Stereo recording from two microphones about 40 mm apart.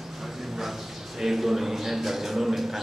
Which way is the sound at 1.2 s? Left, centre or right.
Centre.